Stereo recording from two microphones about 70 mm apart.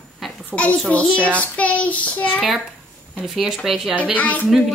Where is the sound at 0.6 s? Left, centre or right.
Centre.